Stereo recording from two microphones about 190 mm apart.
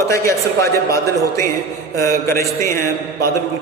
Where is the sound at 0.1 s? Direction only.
15° left (ahead or behind).